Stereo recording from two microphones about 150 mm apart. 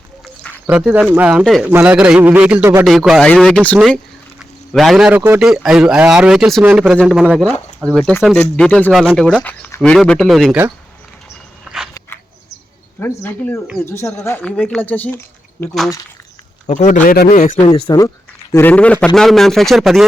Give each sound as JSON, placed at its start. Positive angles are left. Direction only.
{"t": 0.7, "sound": "a man's voice", "side_deg": -10}
{"t": 3.8, "sound": "a sound", "side_deg": 0}
{"t": 5.4, "sound": "speech", "side_deg": -5}
{"t": 13.0, "sound": "speech", "side_deg": 15}
{"t": 16.6, "sound": "speech", "side_deg": 55}
{"t": 17.8, "sound": "speech", "side_deg": 25}
{"t": 18.5, "sound": "speech", "side_deg": 10}